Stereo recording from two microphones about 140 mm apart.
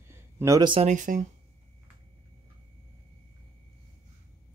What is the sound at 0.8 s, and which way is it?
Speech, 65° right (ahead or behind).